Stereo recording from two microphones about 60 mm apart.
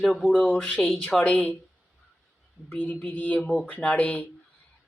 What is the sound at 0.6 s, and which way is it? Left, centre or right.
Speech, centre.